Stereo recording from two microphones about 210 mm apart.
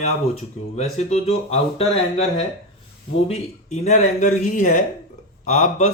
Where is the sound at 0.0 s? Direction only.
30° left (ahead or behind).